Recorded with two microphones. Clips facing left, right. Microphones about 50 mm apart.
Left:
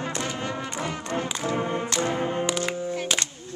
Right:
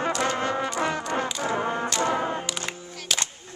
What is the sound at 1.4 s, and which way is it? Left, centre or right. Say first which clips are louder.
Music: even; right.